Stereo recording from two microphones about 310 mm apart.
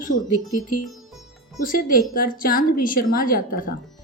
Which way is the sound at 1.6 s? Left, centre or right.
Left.